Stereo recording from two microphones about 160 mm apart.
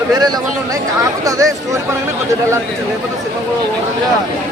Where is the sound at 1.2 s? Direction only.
20° right (ahead or behind).